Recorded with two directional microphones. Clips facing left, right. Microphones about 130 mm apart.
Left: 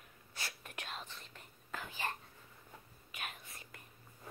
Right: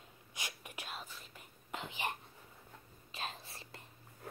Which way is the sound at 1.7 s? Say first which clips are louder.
Right 1 dB; 20° right (ahead or behind).